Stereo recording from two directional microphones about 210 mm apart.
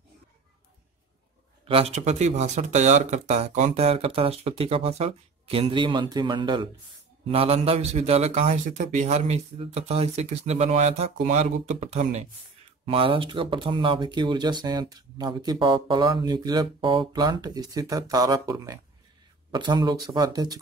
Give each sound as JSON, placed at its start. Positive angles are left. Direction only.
{"t": 1.7, "sound": "a man's voice", "side_deg": -30}